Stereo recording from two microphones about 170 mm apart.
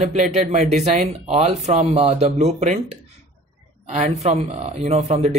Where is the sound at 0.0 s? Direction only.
40° right (ahead or behind).